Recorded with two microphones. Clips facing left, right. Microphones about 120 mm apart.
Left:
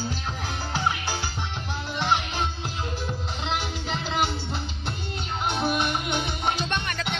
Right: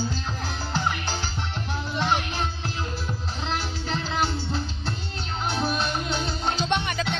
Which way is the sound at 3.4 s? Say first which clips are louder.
Even; 15° left (ahead or behind).